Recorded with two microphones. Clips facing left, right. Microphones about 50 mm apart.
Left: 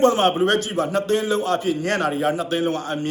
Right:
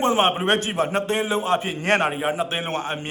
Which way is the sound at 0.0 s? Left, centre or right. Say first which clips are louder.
Left 3 dB; right.